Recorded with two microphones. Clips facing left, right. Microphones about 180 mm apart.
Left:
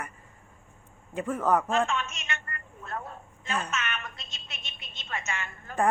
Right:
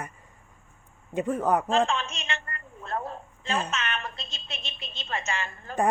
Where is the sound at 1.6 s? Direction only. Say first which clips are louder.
Right 3 dB; 30° right (ahead or behind).